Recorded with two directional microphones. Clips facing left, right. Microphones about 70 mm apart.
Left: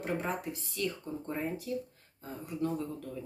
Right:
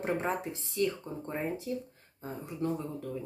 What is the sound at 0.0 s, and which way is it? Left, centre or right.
Speech, right.